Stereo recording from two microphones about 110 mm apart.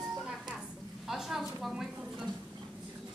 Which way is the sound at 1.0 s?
5° right (ahead or behind).